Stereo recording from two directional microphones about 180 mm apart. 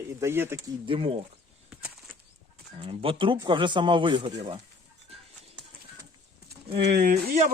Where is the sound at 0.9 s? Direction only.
30° right (ahead or behind).